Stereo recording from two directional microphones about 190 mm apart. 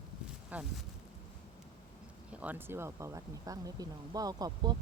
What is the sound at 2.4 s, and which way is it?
Speech, 10° right (ahead or behind).